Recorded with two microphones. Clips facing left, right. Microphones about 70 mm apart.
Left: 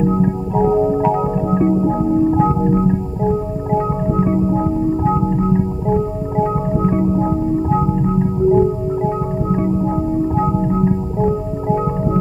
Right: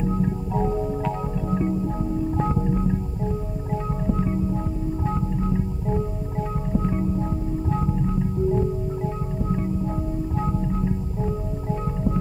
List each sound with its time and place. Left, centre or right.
0.0 s music: left
2.3 s music: left